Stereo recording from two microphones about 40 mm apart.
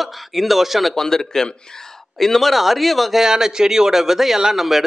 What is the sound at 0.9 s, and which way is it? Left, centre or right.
Speech, centre.